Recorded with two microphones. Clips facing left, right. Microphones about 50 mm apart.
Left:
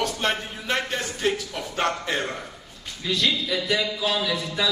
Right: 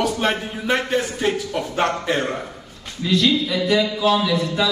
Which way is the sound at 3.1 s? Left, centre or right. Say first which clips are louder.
Right 6 dB; right.